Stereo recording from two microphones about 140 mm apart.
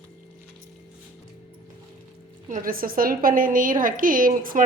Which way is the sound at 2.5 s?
90° right.